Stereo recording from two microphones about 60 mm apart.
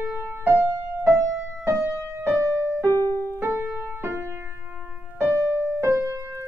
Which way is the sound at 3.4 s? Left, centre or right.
Right.